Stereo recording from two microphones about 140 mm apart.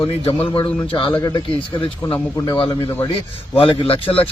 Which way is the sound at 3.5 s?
40° left (ahead or behind).